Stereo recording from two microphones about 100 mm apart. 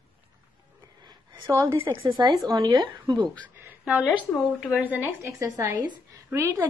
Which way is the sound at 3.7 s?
15° right (ahead or behind).